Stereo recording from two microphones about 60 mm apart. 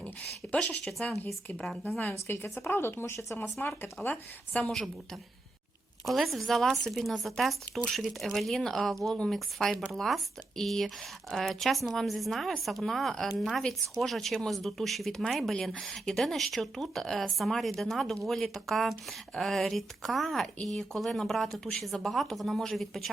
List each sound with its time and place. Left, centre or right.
0.4 s a woman's voice: centre
2.2 s speech: left
3.3 s speech: left
4.1 s a woman's voice: centre
6.1 s speech: centre